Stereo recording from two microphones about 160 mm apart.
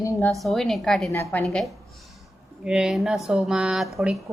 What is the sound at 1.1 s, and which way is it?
Speech, 15° left (ahead or behind).